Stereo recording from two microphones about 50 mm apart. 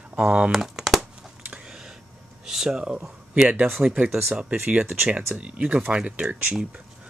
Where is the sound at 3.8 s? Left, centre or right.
Right.